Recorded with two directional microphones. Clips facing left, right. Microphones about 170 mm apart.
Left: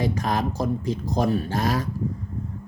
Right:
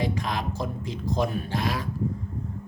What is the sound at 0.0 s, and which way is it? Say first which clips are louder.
Speech: left 4 dB; 45° left (ahead or behind).